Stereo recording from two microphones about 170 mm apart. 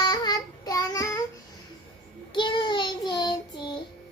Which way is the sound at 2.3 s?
30° left (ahead or behind).